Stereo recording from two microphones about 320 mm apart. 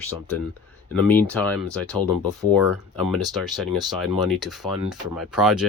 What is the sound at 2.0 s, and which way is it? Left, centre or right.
Speech, centre.